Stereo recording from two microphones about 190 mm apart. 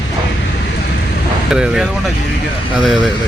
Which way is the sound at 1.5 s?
5° right (ahead or behind).